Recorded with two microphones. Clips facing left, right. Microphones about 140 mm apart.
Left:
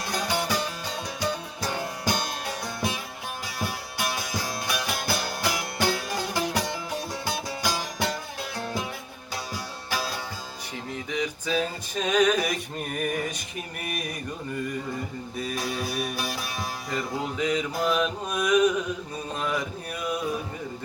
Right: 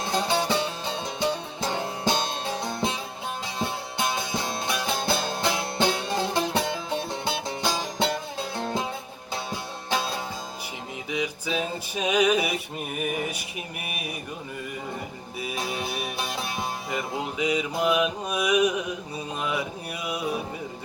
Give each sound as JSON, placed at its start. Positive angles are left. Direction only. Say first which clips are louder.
{"t": 0.0, "sound": "music", "louder": "right 3 dB", "side_deg": -25}
{"t": 9.9, "sound": "music", "louder": "right 3 dB", "side_deg": -25}
{"t": 11.1, "sound": "music", "louder": "right 1 dB", "side_deg": -10}
{"t": 11.5, "sound": "a sound", "louder": "left 2 dB", "side_deg": -5}
{"t": 15.5, "sound": "music", "louder": "even", "side_deg": -25}
{"t": 16.9, "sound": "mantra", "louder": "left 2 dB", "side_deg": -10}